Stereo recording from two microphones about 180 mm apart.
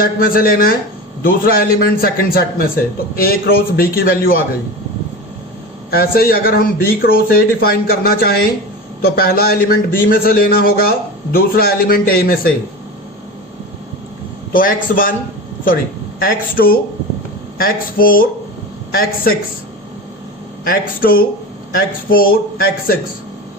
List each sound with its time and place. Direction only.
0.0 s a man's voice: 55° left (ahead or behind)
5.9 s a man's voice: 55° left (ahead or behind)
14.5 s speech: 50° left (ahead or behind)
16.2 s a man's voice: 55° left (ahead or behind)
20.7 s a man's voice: 55° left (ahead or behind)